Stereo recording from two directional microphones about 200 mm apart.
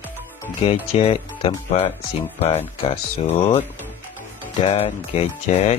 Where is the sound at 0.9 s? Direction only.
30° left (ahead or behind).